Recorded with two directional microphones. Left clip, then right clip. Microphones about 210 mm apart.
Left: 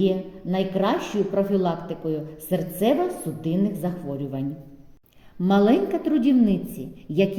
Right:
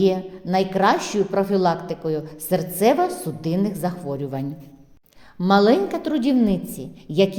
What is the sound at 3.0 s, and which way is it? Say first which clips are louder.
Speech: right 4 dB; 65° right (ahead or behind).